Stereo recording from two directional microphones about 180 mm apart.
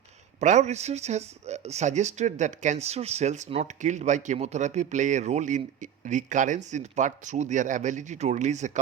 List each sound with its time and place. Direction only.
0.3 s speech: 40° right (ahead or behind)